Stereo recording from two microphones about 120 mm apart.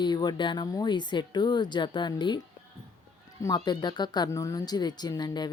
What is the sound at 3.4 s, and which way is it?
Speech, 35° left (ahead or behind).